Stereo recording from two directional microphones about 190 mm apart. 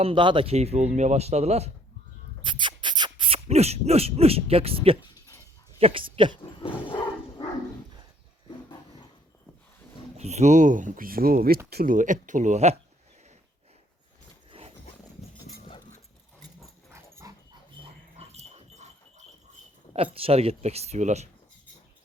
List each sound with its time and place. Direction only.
0.0 s speech: 25° right (ahead or behind)
2.4 s beatboxing: 25° right (ahead or behind)
5.8 s speech: 25° right (ahead or behind)
6.4 s a sound: 25° left (ahead or behind)
10.2 s speech: 35° right (ahead or behind)
16.9 s dog: 15° right (ahead or behind)
18.2 s dog: 35° right (ahead or behind)
19.9 s speech: 30° right (ahead or behind)